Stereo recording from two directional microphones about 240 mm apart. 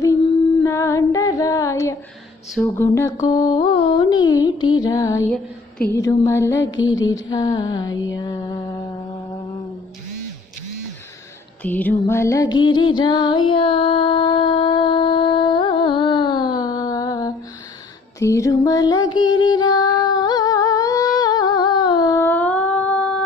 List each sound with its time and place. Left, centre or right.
0.7 s female singing: centre
2.5 s music: centre
6.6 s music: left
7.1 s music: centre
7.9 s music: left
8.2 s mantra: centre
11.6 s music: centre